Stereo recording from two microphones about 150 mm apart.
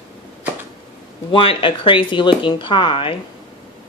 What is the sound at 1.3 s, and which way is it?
Speech, 35° left (ahead or behind).